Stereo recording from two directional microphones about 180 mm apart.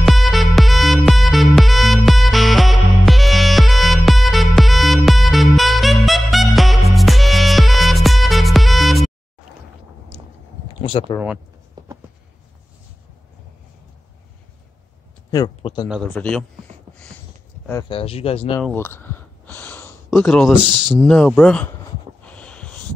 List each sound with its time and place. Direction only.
0.0 s music: centre (ahead or behind)
10.8 s a sound: 30° left (ahead or behind)
11.8 s writing: 20° right (ahead or behind)
15.3 s speech: 25° left (ahead or behind)
16.1 s speech: 5° left (ahead or behind)
17.8 s speech: 30° left (ahead or behind)
18.6 s gasp: 10° left (ahead or behind)
20.1 s speech: centre (ahead or behind)
22.2 s a sound: 5° left (ahead or behind)